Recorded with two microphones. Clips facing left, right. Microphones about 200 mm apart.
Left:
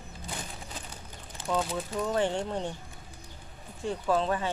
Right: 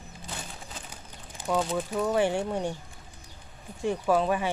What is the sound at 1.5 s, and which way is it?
Speech, 10° right (ahead or behind).